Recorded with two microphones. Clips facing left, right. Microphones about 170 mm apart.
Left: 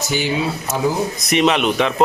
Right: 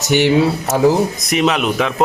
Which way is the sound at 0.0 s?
70° right (ahead or behind).